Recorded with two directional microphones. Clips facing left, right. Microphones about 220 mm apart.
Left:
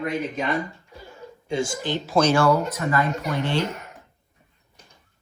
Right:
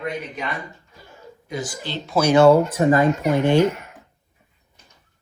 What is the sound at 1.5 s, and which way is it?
Speech, 25° left (ahead or behind).